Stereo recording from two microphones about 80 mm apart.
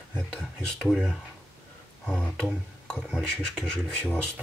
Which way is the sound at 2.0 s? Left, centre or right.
Centre.